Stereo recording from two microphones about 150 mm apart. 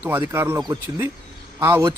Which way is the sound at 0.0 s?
15° right (ahead or behind).